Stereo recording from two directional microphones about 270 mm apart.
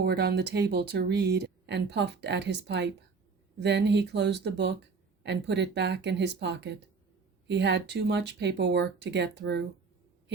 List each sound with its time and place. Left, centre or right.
0.0 s speech: right